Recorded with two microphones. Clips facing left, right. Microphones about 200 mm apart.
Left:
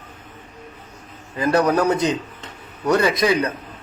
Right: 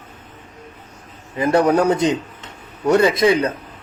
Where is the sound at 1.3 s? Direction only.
25° right (ahead or behind).